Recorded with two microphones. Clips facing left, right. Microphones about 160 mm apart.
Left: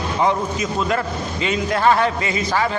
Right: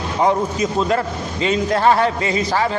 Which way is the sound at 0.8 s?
30° right (ahead or behind).